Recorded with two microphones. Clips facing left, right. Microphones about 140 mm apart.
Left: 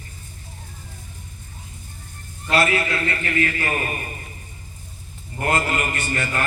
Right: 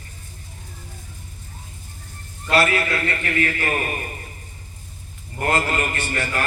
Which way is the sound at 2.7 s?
25° left (ahead or behind).